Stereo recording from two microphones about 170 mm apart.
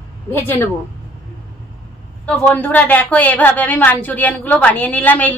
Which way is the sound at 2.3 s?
10° left (ahead or behind).